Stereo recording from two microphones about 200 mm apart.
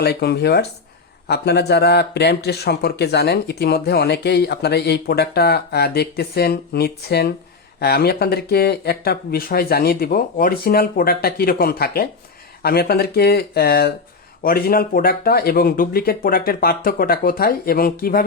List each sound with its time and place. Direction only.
0.0 s speech: 55° left (ahead or behind)